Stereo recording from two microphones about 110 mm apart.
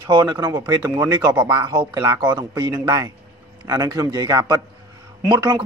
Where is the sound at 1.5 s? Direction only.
45° right (ahead or behind).